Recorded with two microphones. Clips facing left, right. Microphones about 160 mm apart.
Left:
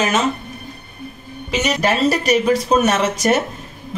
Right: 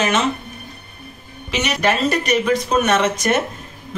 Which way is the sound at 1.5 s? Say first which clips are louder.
Left 1 dB; 40° left (ahead or behind).